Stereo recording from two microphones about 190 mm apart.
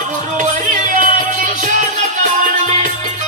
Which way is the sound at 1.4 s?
45° right (ahead or behind).